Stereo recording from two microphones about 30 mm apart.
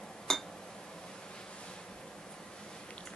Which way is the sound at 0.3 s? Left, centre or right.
Centre.